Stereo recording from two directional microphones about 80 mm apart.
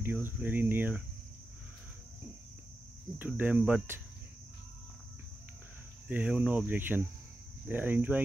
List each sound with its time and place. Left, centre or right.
0.0 s speech: right
3.3 s speech: right
6.0 s speech: centre